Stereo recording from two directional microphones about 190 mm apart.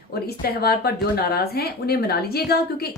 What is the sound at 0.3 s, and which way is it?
A woman's voice, 55° left (ahead or behind).